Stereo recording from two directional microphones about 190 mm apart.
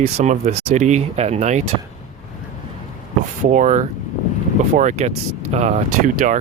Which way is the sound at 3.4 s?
40° right (ahead or behind).